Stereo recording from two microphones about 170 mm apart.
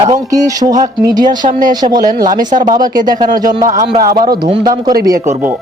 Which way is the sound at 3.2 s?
55° right (ahead or behind).